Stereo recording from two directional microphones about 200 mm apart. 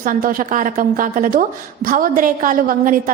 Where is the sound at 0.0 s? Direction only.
45° right (ahead or behind).